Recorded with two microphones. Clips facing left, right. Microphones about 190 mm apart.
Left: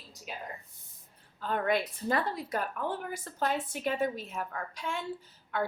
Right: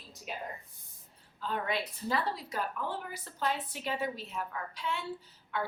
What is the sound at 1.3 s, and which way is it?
A woman's voice, 55° left (ahead or behind).